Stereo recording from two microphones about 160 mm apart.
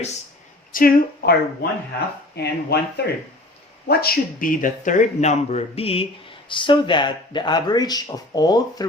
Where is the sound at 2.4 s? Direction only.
90° left.